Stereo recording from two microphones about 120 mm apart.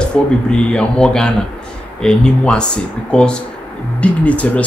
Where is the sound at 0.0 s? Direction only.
5° left (ahead or behind).